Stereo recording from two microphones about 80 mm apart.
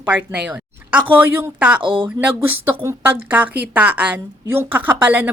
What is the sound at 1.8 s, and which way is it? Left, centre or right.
Speech, right.